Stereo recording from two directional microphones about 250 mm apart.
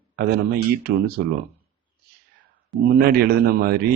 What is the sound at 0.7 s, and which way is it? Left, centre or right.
Speech, right.